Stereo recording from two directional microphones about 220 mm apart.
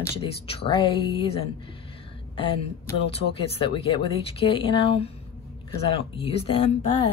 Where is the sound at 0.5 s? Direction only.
25° left (ahead or behind).